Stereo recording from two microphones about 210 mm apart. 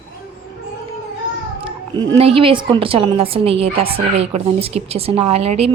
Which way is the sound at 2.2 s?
25° right (ahead or behind).